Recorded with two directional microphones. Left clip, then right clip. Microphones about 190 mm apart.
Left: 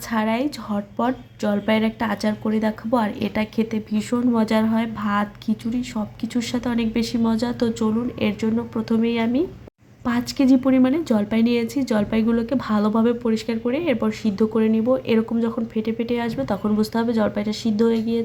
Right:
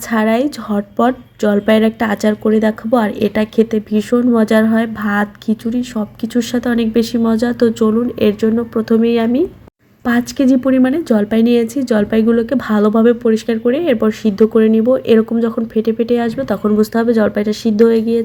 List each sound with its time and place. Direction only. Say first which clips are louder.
0.1 s a woman's voice: right 8 dB; 20° right (ahead or behind)